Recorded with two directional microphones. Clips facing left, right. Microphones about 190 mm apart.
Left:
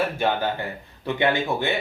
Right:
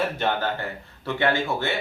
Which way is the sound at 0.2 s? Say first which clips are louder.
Left 2 dB; 10° left (ahead or behind).